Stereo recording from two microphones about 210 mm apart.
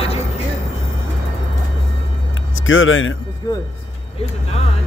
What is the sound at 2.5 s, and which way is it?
Speech, 70° left (ahead or behind).